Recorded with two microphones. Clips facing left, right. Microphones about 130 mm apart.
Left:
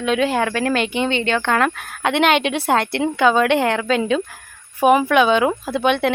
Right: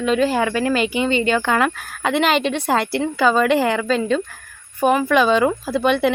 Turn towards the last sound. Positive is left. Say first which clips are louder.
# right 1 dB
turn(degrees=0)  # may be behind; listen again after turning